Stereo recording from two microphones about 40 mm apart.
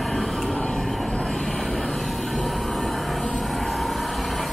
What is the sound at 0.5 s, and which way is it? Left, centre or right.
Vehicle, left.